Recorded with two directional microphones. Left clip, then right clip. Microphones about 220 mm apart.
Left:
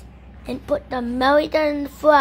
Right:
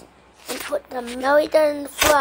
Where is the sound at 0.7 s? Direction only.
5° left (ahead or behind).